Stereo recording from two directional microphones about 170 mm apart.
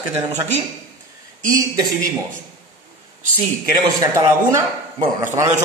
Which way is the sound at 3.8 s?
20° right (ahead or behind).